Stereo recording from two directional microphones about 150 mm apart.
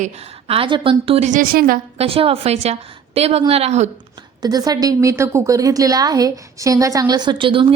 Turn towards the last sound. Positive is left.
turn(degrees=-35)  # may be behind; listen again after turning